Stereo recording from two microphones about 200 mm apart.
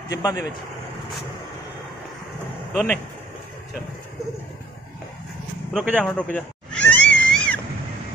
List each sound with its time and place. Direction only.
0.1 s speech: 20° left (ahead or behind)
2.7 s speech: centre (ahead or behind)
5.7 s speech: 5° right (ahead or behind)
6.0 s cat: 5° left (ahead or behind)